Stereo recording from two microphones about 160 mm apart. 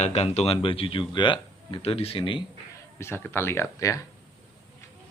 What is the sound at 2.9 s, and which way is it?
Speech, 15° left (ahead or behind).